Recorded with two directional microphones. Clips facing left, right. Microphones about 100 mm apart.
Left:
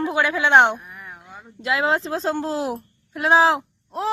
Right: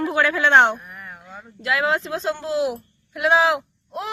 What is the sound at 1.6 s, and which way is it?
A child's voice, 30° left (ahead or behind).